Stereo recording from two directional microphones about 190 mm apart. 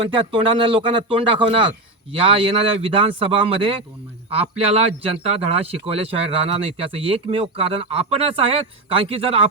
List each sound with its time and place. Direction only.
0.0 s speech: 25° right (ahead or behind)